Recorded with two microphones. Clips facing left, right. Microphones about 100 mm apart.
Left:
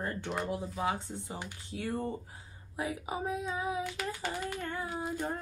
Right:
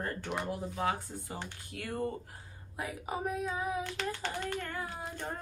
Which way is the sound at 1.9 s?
Centre (ahead or behind).